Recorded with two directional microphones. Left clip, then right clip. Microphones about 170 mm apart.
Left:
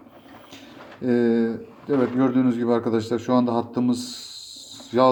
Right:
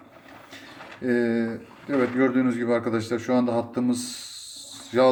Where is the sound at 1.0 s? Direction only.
15° left (ahead or behind).